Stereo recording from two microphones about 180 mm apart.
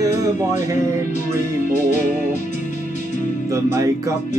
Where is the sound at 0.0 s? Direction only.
15° right (ahead or behind).